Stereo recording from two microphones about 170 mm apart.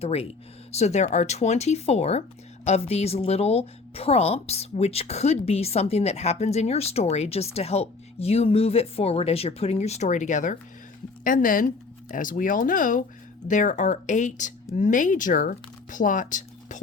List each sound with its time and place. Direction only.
0.0 s a woman's voice: 35° left (ahead or behind)